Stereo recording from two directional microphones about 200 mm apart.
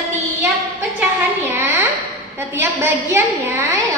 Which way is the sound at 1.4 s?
10° right (ahead or behind).